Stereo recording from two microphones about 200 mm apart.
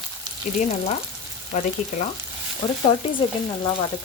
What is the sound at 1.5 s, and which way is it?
Speech, 35° left (ahead or behind).